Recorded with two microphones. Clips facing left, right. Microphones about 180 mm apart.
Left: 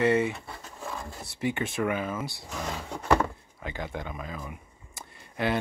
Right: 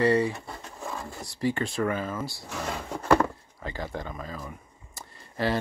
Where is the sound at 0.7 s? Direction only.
10° right (ahead or behind).